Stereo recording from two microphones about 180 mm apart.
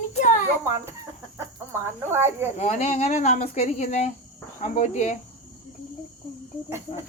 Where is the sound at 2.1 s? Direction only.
15° right (ahead or behind).